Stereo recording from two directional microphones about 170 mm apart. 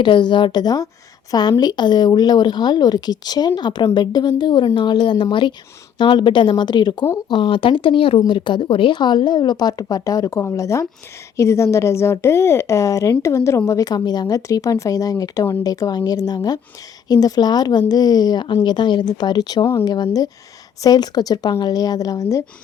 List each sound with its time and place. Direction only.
0.0 s a woman's voice: 25° left (ahead or behind)